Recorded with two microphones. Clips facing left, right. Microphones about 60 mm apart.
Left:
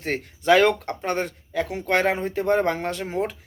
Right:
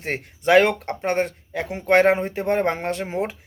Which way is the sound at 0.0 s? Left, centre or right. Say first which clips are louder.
Right 1 dB; right.